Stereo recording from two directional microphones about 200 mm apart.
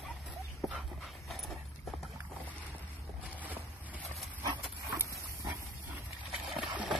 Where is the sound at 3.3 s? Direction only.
10° right (ahead or behind).